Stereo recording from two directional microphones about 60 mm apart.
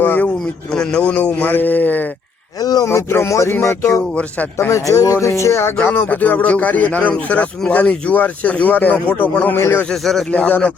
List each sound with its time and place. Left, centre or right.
0.0 s a man's voice: left
2.6 s a sound: left
2.9 s speech: left
4.1 s speech: left
4.7 s speech: left
5.2 s speech: left
5.8 s speech: left
9.6 s a man's voice: left
9.9 s speech: centre
10.3 s speech: left